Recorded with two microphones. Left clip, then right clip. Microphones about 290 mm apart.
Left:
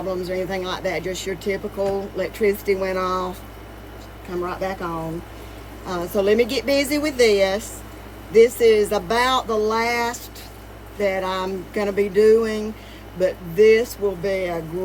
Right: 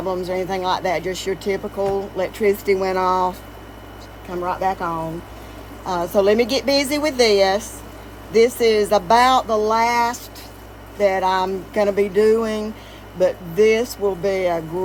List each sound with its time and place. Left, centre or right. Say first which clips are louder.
0.1 s speech: right 2 dB; centre
4.4 s speech: right 7 dB; centre